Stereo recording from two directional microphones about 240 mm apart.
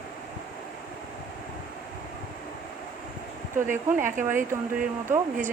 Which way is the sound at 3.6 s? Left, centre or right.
Right.